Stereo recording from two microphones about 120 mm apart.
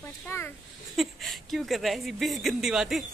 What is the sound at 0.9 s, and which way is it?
A woman's voice, centre (ahead or behind).